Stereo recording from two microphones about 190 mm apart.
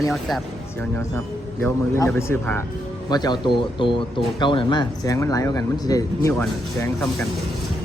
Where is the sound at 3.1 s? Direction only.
20° left (ahead or behind).